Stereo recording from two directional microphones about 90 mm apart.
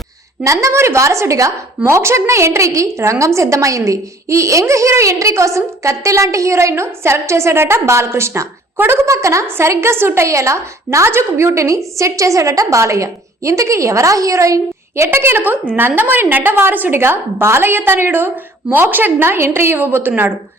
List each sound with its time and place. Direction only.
0.4 s a woman's voice: 35° right (ahead or behind)